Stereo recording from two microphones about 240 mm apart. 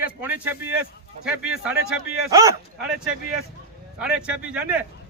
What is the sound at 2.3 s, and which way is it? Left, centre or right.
Speech, centre.